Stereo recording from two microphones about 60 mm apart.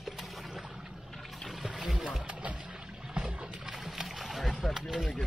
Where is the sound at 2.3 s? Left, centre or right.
Centre.